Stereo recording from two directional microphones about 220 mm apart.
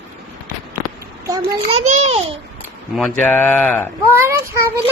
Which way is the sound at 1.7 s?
30° right (ahead or behind).